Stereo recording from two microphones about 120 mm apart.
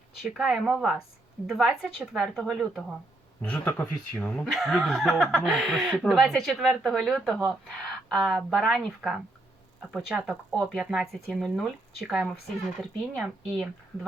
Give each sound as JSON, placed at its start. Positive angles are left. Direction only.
{"t": 0.2, "sound": "speech", "side_deg": 0}
{"t": 3.4, "sound": "speech", "side_deg": 10}
{"t": 4.5, "sound": "speech", "side_deg": 0}